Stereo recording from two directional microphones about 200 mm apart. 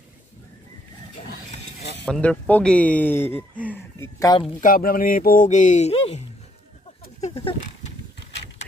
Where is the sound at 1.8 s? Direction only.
60° left (ahead or behind).